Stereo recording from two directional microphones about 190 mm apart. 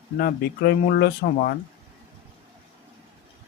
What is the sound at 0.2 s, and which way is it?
Speech, 55° left (ahead or behind).